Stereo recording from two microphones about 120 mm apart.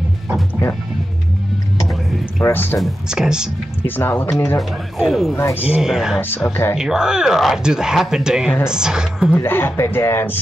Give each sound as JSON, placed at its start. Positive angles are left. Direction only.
{"t": 2.4, "sound": "speech", "side_deg": 15}
{"t": 2.8, "sound": "speech", "side_deg": -5}
{"t": 3.8, "sound": "speech", "side_deg": 15}
{"t": 4.6, "sound": "speech", "side_deg": -5}
{"t": 5.3, "sound": "speech", "side_deg": 20}
{"t": 5.6, "sound": "speech", "side_deg": -5}
{"t": 6.2, "sound": "speech", "side_deg": 20}
{"t": 6.8, "sound": "speech", "side_deg": -5}
{"t": 9.3, "sound": "speech", "side_deg": 15}